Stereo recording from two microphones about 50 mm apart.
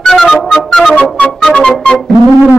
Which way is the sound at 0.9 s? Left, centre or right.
Left.